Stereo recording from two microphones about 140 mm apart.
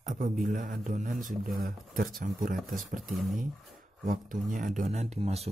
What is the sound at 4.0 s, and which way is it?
Speech, 75° right (ahead or behind).